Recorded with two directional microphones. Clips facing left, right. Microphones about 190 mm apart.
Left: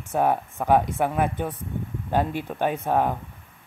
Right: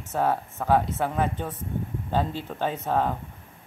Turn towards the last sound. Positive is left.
turn(degrees=10)  # may be behind; listen again after turning